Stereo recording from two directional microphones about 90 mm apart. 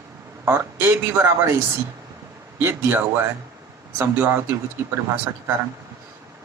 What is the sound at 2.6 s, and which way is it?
Speech, 25° right (ahead or behind).